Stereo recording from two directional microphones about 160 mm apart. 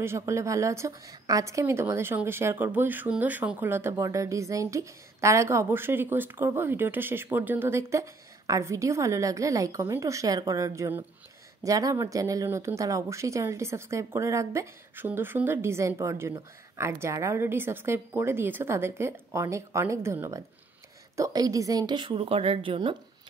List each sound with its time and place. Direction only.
0.0 s a woman's voice: 15° right (ahead or behind)